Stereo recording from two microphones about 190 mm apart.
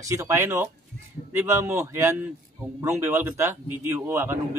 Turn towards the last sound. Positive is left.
turn(degrees=-10)  # may be behind; listen again after turning